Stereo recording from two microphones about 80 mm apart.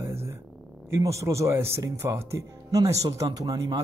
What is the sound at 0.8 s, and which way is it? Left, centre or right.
Speech, right.